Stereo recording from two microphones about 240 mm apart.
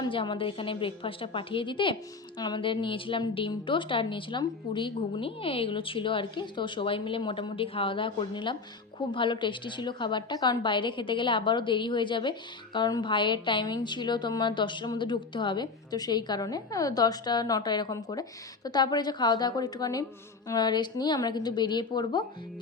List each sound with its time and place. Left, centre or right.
0.0 s a woman's voice: centre